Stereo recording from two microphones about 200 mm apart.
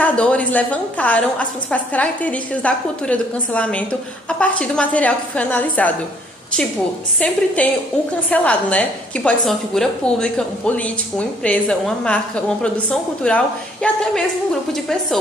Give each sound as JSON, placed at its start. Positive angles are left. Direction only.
{"t": 0.0, "sound": "a woman's voice", "side_deg": 5}
{"t": 7.2, "sound": "a woman's voice", "side_deg": 5}